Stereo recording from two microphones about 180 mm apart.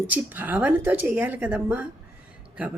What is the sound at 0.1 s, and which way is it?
Speech, 10° right (ahead or behind).